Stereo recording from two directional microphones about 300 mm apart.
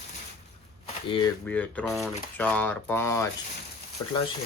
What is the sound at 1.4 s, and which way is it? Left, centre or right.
Speech, centre.